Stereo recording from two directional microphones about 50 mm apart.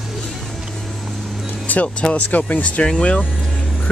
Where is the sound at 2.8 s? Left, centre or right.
Centre.